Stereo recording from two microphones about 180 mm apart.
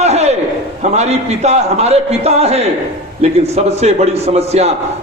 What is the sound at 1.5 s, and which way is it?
A man's voice, 35° right (ahead or behind).